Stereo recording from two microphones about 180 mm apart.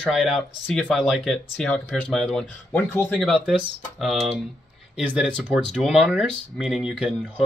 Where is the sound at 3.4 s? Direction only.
5° right (ahead or behind).